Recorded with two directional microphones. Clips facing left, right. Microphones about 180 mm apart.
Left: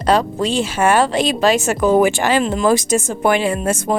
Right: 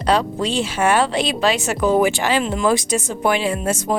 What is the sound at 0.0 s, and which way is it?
Speech, 45° left (ahead or behind).